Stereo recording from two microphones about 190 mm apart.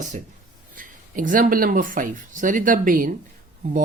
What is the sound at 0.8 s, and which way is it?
Speech, 45° right (ahead or behind).